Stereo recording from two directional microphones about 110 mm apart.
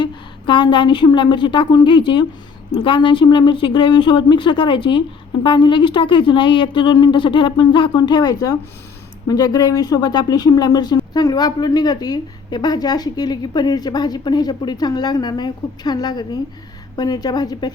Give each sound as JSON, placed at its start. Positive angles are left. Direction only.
{"t": 0.0, "sound": "a woman's voice", "side_deg": 45}